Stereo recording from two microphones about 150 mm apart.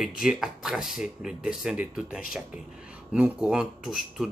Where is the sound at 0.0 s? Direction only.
5° right (ahead or behind).